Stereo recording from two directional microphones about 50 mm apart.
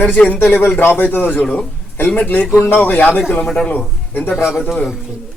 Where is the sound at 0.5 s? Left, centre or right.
Left.